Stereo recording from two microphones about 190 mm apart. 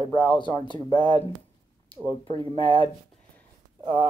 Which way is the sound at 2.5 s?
25° left (ahead or behind).